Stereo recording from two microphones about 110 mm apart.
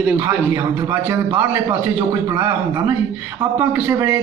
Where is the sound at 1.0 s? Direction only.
15° right (ahead or behind).